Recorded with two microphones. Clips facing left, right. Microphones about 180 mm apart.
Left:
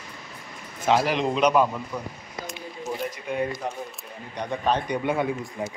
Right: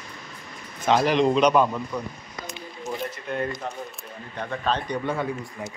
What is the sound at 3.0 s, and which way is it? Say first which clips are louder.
Speech: left 2 dB; 10° left (ahead or behind).